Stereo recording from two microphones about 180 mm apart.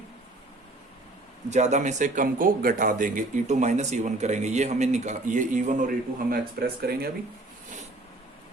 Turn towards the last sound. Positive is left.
turn(degrees=-60)  # may be behind; listen again after turning